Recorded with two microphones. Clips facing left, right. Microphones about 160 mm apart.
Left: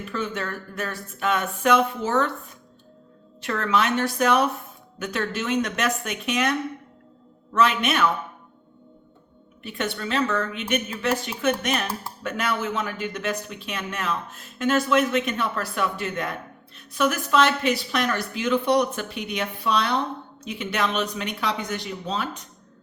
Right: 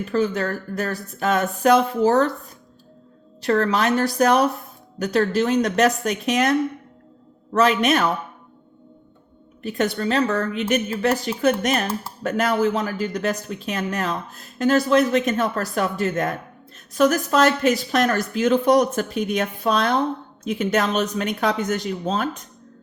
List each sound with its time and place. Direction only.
0.0 s speech: 40° right (ahead or behind)
3.4 s speech: 35° right (ahead or behind)
9.6 s speech: 40° right (ahead or behind)